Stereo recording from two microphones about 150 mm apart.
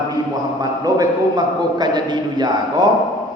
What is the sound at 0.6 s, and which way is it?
A man's voice, 25° right (ahead or behind).